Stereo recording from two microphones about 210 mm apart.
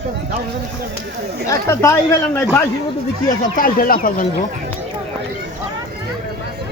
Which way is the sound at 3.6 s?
40° left (ahead or behind).